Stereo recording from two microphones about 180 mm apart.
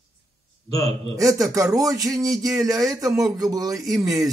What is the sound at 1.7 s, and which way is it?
Speech, 20° right (ahead or behind).